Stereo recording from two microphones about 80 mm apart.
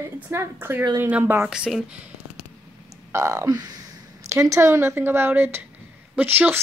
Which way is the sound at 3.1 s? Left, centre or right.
Right.